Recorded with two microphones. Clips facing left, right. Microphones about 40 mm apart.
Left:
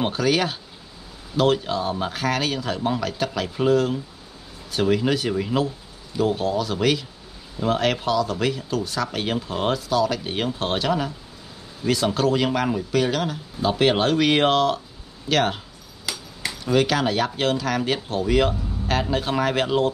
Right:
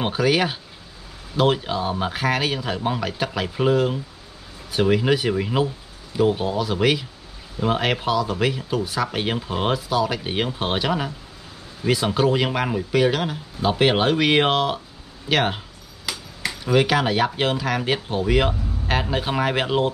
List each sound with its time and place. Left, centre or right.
0.0 s speech: centre
16.1 s a sound: centre
16.6 s speech: centre